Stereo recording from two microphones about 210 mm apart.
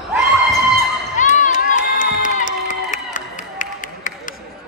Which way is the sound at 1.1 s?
35° left (ahead or behind).